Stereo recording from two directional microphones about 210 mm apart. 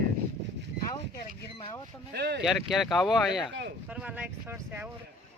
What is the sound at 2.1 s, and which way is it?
Speech, 50° right (ahead or behind).